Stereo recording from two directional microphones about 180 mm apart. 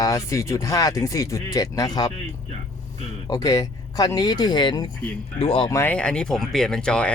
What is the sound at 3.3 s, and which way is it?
Speech, 20° left (ahead or behind).